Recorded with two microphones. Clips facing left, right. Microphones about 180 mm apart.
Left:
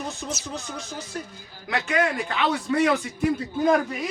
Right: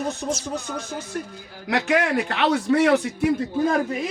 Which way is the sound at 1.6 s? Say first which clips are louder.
Right 3 dB; 70° right (ahead or behind).